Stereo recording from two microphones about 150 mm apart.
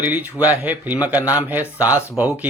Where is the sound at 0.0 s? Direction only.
10° right (ahead or behind).